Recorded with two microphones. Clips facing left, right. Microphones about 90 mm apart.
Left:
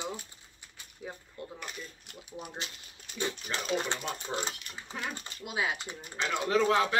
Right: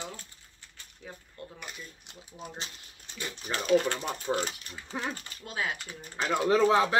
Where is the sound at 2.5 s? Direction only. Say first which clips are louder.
Left 1 dB; 30° right (ahead or behind).